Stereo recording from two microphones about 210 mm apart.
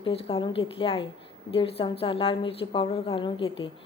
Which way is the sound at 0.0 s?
25° left (ahead or behind).